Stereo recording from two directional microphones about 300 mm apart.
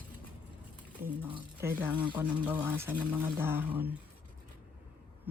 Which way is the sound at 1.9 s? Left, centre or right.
Centre.